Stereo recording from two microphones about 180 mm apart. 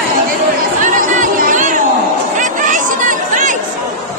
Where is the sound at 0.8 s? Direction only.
45° right (ahead or behind).